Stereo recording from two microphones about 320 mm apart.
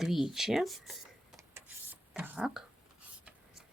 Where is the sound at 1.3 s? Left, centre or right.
Centre.